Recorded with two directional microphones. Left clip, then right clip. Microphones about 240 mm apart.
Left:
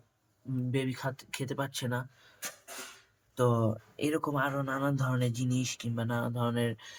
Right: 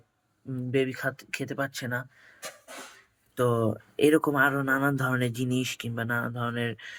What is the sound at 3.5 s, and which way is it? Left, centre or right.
Speech, centre.